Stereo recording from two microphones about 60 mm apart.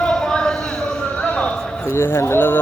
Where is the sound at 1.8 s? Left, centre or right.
Left.